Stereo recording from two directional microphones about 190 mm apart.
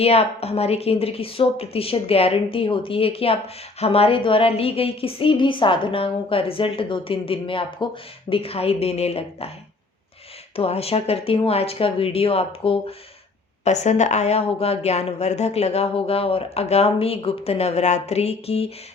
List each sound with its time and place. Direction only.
0.0 s a woman's voice: 30° left (ahead or behind)
10.5 s a woman's voice: 30° left (ahead or behind)